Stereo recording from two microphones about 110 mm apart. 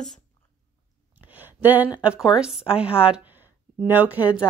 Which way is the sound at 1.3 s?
15° right (ahead or behind).